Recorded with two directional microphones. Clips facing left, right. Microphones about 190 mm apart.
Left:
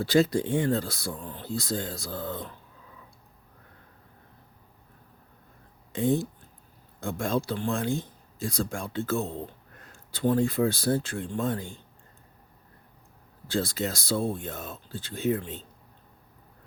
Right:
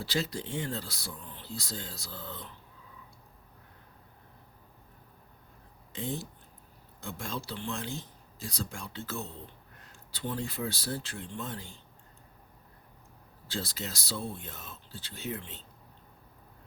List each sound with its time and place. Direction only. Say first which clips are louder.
0.0 s speech: left 11 dB; 50° left (ahead or behind)
5.9 s speech: left 11 dB; 55° left (ahead or behind)
13.5 s speech: left 9 dB; 50° left (ahead or behind)